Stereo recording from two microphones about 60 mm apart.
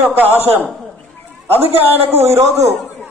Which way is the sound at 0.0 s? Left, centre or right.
Right.